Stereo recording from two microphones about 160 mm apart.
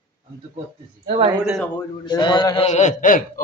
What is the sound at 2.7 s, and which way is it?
Speech, 50° left (ahead or behind).